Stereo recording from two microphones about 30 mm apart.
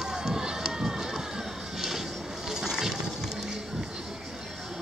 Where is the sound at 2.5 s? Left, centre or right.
Centre.